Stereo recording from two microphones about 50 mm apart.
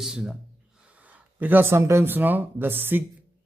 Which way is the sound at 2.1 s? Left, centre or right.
Right.